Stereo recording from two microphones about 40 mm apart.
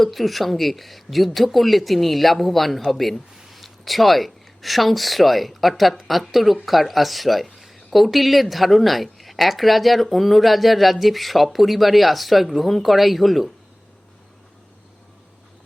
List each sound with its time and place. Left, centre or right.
0.0 s speech: centre